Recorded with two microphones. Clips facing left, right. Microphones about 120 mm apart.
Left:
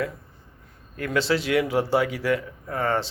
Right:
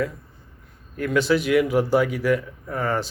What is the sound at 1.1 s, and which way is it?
Speech, 30° left (ahead or behind).